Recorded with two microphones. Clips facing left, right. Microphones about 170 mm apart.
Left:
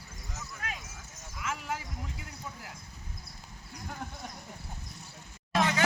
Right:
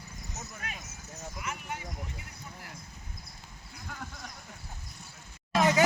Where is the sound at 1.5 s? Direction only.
90° left.